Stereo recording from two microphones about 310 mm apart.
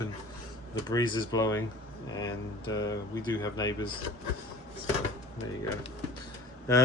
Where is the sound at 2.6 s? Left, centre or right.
Centre.